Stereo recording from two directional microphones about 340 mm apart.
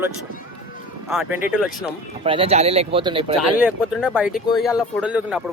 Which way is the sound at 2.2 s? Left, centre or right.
Centre.